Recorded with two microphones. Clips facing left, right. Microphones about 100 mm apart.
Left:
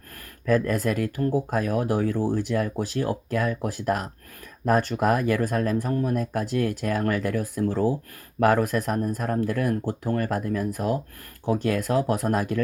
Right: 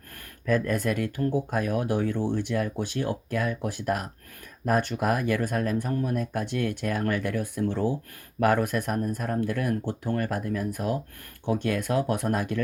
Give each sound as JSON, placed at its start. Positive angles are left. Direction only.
{"t": 0.9, "sound": "speech", "side_deg": 35}